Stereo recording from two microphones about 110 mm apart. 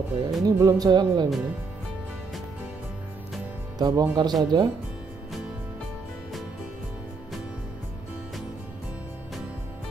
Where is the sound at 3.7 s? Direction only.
40° right (ahead or behind).